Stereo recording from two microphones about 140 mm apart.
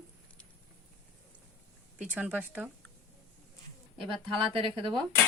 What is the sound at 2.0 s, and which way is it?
Speech, 10° right (ahead or behind).